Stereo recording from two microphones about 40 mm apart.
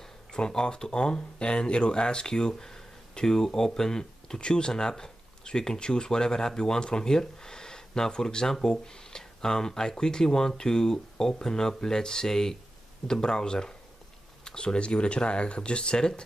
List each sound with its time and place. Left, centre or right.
0.0 s speech: centre